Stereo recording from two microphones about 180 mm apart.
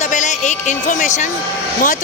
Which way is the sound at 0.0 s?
40° left (ahead or behind).